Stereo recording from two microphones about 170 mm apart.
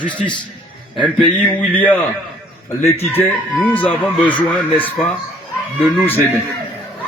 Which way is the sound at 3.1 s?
15° left (ahead or behind).